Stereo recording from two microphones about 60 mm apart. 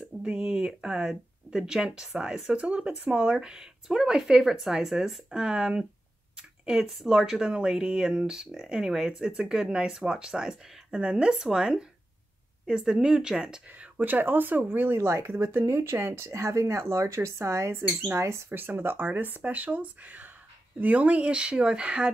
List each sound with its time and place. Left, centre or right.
0.2 s speech: centre
13.9 s speech: right
18.5 s speech: right; by 22.1 s centre